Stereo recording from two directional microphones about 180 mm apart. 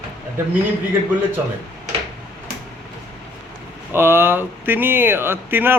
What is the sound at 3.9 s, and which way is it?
A man's voice, 15° right (ahead or behind).